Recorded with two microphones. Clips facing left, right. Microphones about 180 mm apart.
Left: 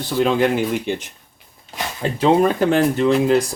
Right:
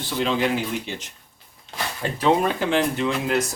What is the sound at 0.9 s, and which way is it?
Speech, 55° left (ahead or behind).